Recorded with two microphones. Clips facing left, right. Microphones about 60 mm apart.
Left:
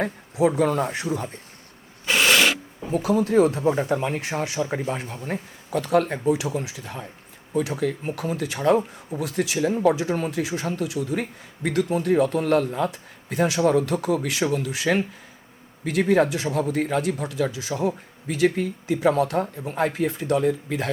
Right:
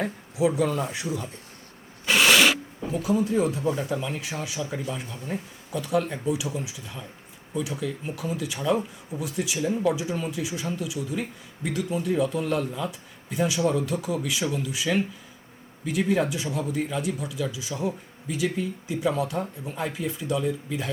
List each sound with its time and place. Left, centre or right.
0.0 s speech: left
2.0 s filing: centre
2.9 s speech: left
3.6 s speech: left